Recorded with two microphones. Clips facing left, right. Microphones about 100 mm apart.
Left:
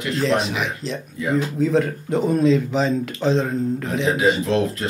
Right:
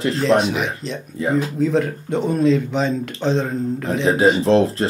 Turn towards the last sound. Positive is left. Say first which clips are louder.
# right 5 dB
turn(degrees=-30)  # may be behind; listen again after turning